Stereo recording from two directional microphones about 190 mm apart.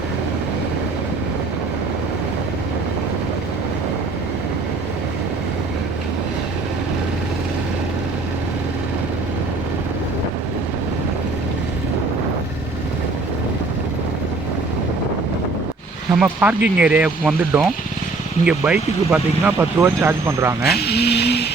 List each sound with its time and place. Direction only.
16.1 s speech: 10° right (ahead or behind)
20.8 s speech: 60° left (ahead or behind)